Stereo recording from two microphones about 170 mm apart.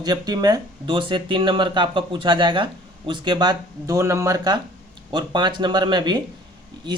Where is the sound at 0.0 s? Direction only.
25° right (ahead or behind).